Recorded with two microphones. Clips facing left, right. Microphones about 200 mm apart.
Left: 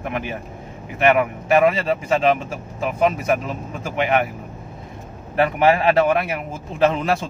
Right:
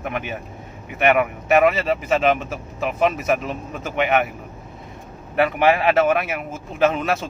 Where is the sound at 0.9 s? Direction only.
30° left (ahead or behind).